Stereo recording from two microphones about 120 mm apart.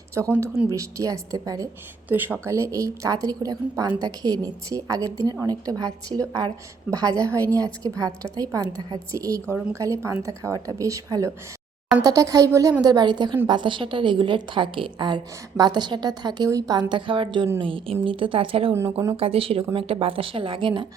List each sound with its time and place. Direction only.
0.2 s speech: 30° right (ahead or behind)
2.0 s a woman's voice: 15° right (ahead or behind); by 16.8 s 30° right (ahead or behind)
16.9 s speech: 45° right (ahead or behind)
18.7 s speech: 20° right (ahead or behind)
19.1 s speech: 50° right (ahead or behind)